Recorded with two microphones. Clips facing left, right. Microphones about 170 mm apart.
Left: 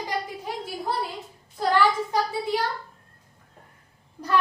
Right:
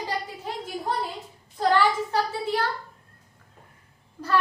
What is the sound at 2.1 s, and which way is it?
Speech, 15° left (ahead or behind).